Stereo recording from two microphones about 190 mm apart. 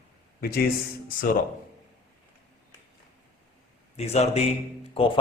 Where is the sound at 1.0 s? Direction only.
45° left (ahead or behind).